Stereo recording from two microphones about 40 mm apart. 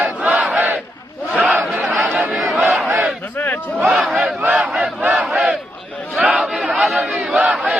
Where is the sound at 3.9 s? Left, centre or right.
Right.